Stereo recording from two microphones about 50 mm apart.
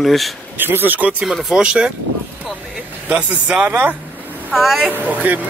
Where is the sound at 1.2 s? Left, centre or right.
Centre.